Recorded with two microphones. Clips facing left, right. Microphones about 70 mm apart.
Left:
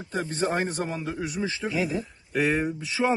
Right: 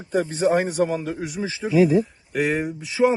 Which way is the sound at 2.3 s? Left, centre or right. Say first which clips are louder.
Right 2 dB; centre.